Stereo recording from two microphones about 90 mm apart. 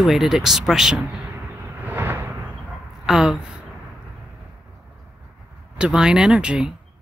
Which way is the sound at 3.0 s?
5° right (ahead or behind).